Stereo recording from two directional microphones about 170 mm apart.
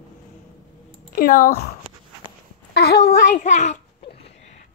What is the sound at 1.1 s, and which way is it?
Speech, 55° left (ahead or behind).